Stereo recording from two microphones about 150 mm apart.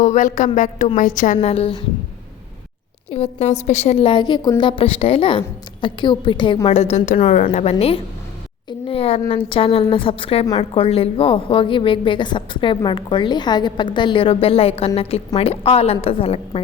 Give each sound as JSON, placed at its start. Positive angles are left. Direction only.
{"t": 0.0, "sound": "a woman's voice", "side_deg": 55}
{"t": 1.4, "sound": "a woman's voice", "side_deg": 45}
{"t": 3.1, "sound": "a woman's voice", "side_deg": 45}
{"t": 4.0, "sound": "a woman's voice", "side_deg": 30}